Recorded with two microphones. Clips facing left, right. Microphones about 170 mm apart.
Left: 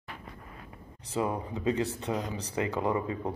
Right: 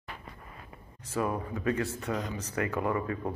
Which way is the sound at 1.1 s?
20° left (ahead or behind).